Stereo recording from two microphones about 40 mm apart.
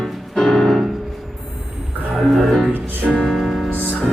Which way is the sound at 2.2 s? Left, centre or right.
Centre.